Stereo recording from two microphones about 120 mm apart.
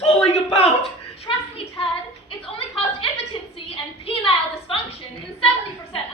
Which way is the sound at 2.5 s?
50° left (ahead or behind).